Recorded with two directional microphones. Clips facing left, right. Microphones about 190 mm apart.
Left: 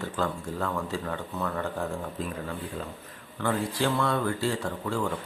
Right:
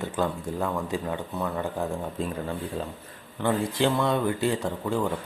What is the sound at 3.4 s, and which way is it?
Speech, 20° right (ahead or behind).